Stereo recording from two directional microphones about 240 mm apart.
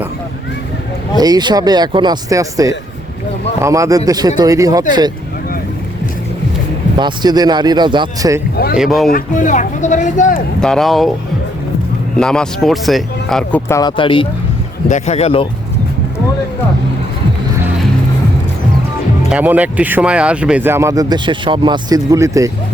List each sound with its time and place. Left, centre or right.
1.1 s speech: centre
7.0 s speech: centre
8.7 s speech: centre
9.0 s speech: left
10.6 s speech: centre
12.1 s speech: centre; by 15.4 s left
19.3 s speech: centre